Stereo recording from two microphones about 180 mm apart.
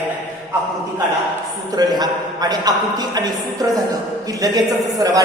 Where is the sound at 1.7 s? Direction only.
20° right (ahead or behind).